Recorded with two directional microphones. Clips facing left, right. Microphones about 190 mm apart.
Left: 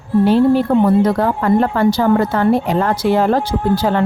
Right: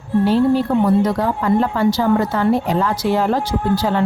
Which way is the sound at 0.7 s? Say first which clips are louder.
Left 3 dB; 55° left (ahead or behind).